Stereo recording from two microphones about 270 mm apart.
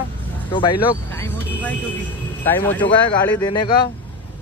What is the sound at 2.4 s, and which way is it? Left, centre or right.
Speech, centre.